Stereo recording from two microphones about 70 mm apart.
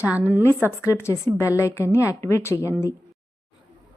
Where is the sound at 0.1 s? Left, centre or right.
Right.